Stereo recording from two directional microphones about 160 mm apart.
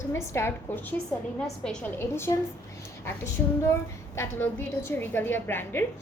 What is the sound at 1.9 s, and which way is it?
A woman's voice, 15° left (ahead or behind).